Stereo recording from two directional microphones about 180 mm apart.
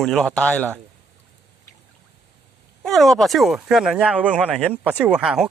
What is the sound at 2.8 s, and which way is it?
Speech, centre (ahead or behind).